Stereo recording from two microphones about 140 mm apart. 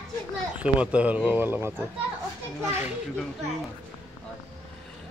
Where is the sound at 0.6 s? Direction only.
10° right (ahead or behind).